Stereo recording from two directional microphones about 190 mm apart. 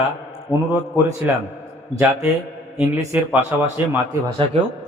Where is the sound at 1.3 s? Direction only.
10° right (ahead or behind).